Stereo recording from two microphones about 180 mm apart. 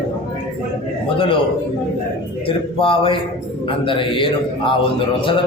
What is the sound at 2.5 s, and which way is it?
Mantra, 30° left (ahead or behind).